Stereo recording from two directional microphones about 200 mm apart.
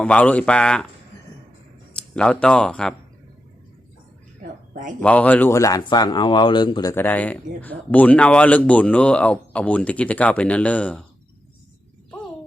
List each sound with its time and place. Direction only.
0.0 s speech: 5° left (ahead or behind)
2.0 s speech: 5° left (ahead or behind)
4.7 s a man's voice: 40° right (ahead or behind)
4.9 s speech: 5° left (ahead or behind); by 6.9 s 20° left (ahead or behind)
6.9 s speech: 10° left (ahead or behind)